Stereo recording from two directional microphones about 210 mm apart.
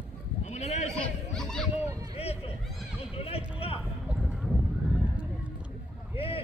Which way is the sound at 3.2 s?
25° left (ahead or behind).